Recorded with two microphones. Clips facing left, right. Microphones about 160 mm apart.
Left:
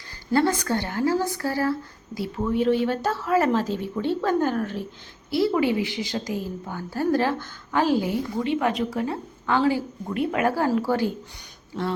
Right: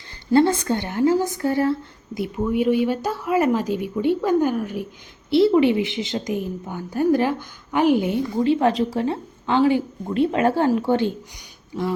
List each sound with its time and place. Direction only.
0.3 s a woman's voice: 25° right (ahead or behind)
5.3 s a woman's voice: 25° right (ahead or behind)